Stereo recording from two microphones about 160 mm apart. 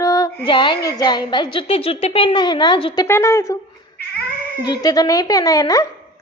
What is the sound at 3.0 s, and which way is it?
Speech, 15° left (ahead or behind).